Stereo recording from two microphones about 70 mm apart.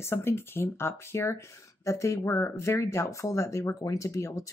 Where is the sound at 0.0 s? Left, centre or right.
Left.